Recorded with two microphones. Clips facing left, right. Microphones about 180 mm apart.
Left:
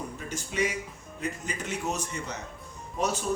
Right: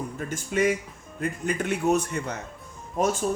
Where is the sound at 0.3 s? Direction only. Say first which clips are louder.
Right 6 dB; 50° right (ahead or behind).